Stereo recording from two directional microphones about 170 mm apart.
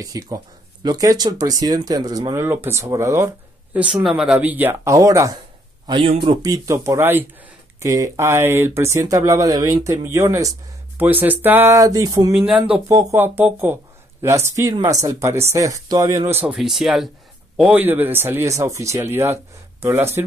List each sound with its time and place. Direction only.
0.0 s speech: 20° right (ahead or behind)
3.7 s speech: 5° right (ahead or behind)
5.9 s speech: 30° right (ahead or behind)
12.4 s speech: 5° right (ahead or behind)
16.3 s speech: 10° right (ahead or behind)